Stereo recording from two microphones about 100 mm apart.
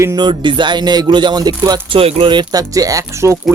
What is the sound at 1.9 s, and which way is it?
Speech, 65° right (ahead or behind).